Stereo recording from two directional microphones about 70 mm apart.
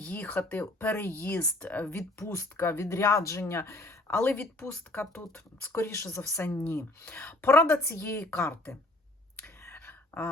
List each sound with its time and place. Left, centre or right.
0.0 s speech: left
2.1 s speech: left
4.1 s speech: left
5.7 s speech: left
7.0 s speech: centre
7.3 s speech: left
9.7 s a sound: left